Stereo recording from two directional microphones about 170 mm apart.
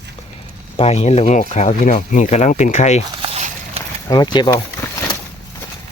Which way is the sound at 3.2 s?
40° right (ahead or behind).